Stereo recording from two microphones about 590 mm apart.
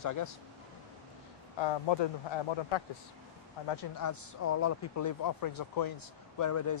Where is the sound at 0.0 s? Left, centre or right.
Left.